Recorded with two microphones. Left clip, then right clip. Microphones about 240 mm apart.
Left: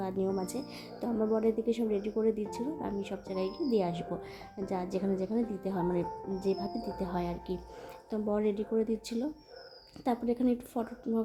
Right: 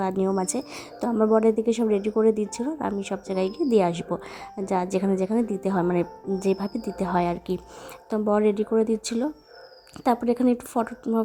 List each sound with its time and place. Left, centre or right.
0.0 s a woman's voice: right